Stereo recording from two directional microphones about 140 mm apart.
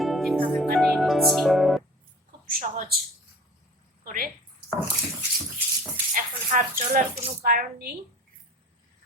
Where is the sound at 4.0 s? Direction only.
90° right.